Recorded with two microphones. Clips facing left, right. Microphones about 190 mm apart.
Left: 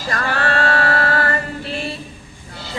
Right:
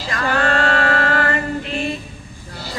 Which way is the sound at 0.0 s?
45° left (ahead or behind).